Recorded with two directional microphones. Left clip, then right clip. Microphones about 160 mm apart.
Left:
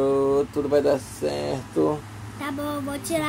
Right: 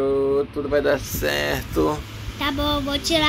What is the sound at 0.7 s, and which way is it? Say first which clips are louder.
Speech: right 1 dB; 45° left (ahead or behind).